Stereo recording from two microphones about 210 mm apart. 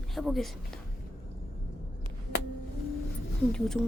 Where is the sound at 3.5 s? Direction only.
Centre (ahead or behind).